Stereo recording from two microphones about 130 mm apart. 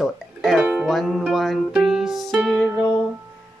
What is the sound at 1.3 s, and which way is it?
Music, centre (ahead or behind).